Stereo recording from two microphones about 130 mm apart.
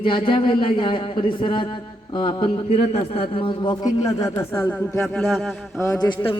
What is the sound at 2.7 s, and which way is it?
A man's voice, 50° left (ahead or behind).